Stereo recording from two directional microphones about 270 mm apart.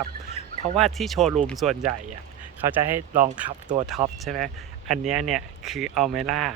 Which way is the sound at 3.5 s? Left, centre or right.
Centre.